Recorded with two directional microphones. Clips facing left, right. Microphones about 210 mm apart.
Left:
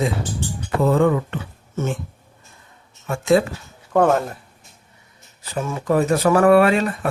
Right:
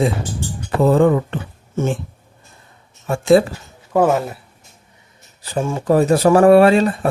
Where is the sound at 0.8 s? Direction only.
35° right (ahead or behind).